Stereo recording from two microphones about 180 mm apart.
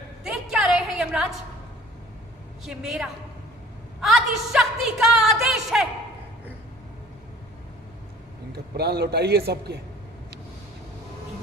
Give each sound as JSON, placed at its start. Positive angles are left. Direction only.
{"t": 0.3, "sound": "a sound", "side_deg": 0}
{"t": 2.6, "sound": "a woman's voice", "side_deg": 0}
{"t": 8.5, "sound": "a man's voice", "side_deg": -60}